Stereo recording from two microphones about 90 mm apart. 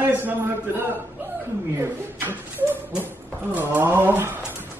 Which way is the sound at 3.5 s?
20° right (ahead or behind).